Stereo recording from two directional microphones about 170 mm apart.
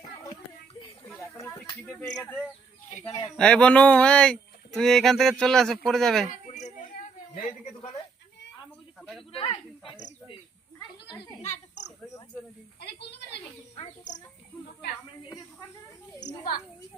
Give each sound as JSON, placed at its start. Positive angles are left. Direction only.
{"t": 0.0, "sound": "a sound", "side_deg": 20}
{"t": 1.3, "sound": "speech", "side_deg": 15}
{"t": 3.1, "sound": "speech", "side_deg": 25}
{"t": 3.3, "sound": "speech", "side_deg": 5}
{"t": 9.0, "sound": "a sound", "side_deg": 0}
{"t": 9.3, "sound": "cricket", "side_deg": 30}
{"t": 12.8, "sound": "a woman's voice", "side_deg": 80}
{"t": 16.2, "sound": "a woman's voice", "side_deg": 60}